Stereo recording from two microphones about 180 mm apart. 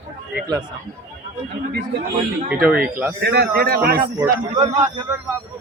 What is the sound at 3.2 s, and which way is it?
Speech, 60° right (ahead or behind).